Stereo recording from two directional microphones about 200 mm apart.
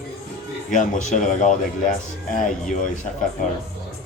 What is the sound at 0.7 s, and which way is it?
A man's voice, 40° left (ahead or behind).